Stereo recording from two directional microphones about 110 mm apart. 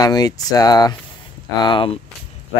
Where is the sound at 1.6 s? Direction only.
50° left (ahead or behind).